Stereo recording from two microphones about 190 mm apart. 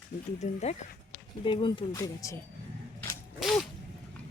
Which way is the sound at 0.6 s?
35° left (ahead or behind).